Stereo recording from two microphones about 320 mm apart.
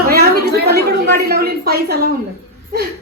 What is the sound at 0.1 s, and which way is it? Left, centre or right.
A woman's voice, right.